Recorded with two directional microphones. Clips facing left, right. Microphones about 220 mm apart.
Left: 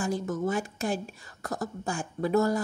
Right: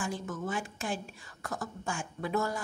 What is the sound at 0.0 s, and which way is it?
Speech, 40° left (ahead or behind).